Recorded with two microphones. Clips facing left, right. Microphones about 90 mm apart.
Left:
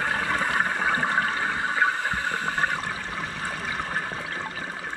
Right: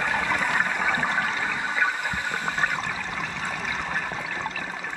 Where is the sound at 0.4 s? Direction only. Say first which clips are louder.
Even; 30° left (ahead or behind).